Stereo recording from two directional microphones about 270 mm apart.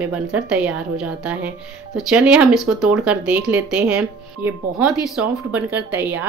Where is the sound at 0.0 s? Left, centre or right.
Centre.